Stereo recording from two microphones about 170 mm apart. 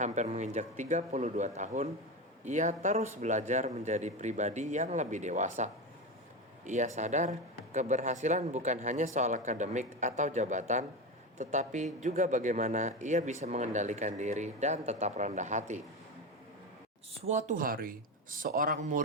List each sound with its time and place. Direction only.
0.0 s speech: 40° right (ahead or behind)
17.2 s speech: 50° right (ahead or behind)